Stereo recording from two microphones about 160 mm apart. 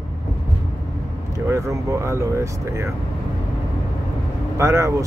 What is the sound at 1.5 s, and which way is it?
Speech, 20° right (ahead or behind).